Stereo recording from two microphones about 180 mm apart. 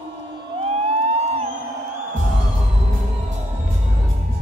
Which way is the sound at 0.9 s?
35° right (ahead or behind).